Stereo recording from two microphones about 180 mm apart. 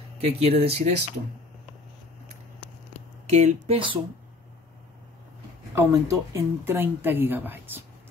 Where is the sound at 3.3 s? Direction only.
40° right (ahead or behind).